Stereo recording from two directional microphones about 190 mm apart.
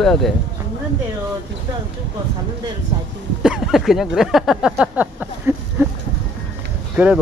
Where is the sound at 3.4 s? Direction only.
5° right (ahead or behind).